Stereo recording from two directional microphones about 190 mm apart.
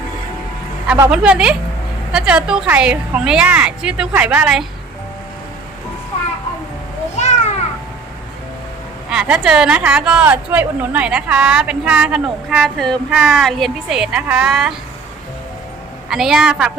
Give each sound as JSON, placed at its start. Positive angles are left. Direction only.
{"t": 0.9, "sound": "a woman's voice", "side_deg": -10}
{"t": 7.2, "sound": "children playing", "side_deg": 35}
{"t": 9.0, "sound": "speech", "side_deg": -5}
{"t": 16.0, "sound": "speech", "side_deg": 0}